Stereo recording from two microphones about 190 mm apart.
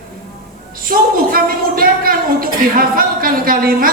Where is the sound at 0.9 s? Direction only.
50° right (ahead or behind).